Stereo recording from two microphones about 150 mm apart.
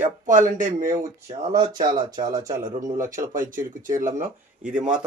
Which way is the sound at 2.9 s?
60° right (ahead or behind).